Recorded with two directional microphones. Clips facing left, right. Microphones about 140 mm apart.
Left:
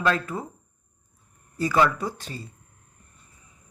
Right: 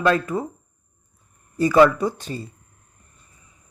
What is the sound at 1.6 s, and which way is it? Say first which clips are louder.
Speech: right 7 dB; 20° right (ahead or behind).